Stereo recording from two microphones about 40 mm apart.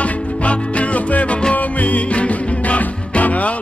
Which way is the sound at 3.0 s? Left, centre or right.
Left.